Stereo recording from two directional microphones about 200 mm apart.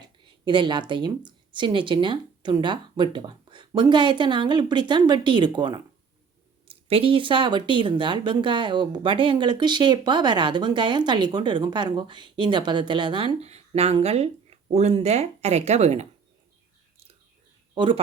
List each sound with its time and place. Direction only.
0.4 s speech: 25° right (ahead or behind)
17.7 s speech: 25° right (ahead or behind)